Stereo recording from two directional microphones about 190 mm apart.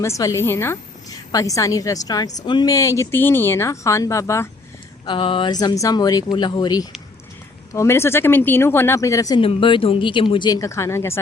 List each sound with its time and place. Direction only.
0.0 s a woman's voice: 15° left (ahead or behind)
5.0 s a woman's voice: 25° left (ahead or behind)
9.4 s speech: 25° left (ahead or behind)